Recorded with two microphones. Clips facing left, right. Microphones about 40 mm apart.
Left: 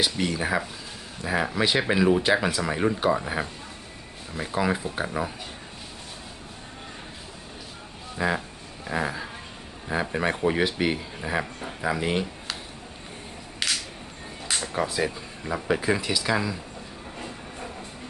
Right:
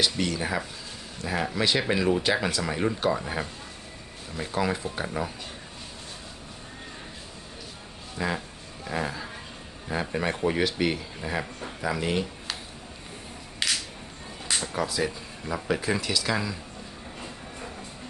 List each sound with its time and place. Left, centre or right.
0.0 s speech: centre
8.2 s speech: centre
8.8 s a sound: centre
9.9 s speech: centre
13.6 s single-lens reflex camera: centre
14.6 s speech: left
15.5 s speech: centre